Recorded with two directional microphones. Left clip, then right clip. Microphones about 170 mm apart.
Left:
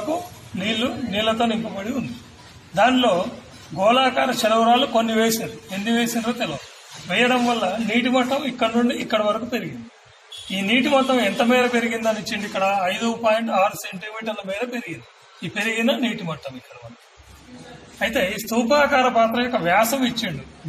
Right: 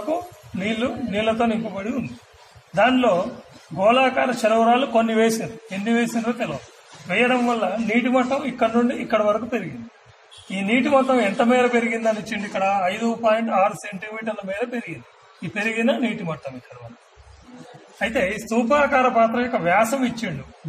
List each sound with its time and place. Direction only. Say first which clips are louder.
0.7 s a man's voice: left 1 dB; 15° right (ahead or behind)
17.9 s a man's voice: even; 15° right (ahead or behind)